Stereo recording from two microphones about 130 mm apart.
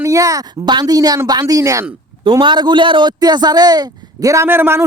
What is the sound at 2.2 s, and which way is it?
A man's voice, 35° right (ahead or behind).